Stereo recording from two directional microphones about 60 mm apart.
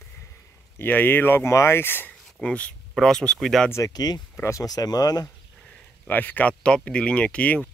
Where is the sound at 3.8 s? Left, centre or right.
Left.